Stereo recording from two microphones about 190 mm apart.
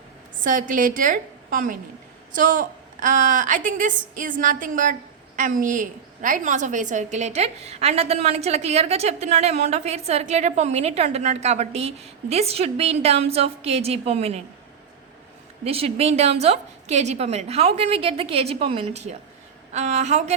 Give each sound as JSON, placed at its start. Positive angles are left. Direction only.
{"t": 0.4, "sound": "a woman's voice", "side_deg": -45}
{"t": 15.6, "sound": "a woman's voice", "side_deg": -30}